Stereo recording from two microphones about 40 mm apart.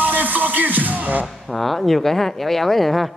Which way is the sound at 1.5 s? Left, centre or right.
Centre.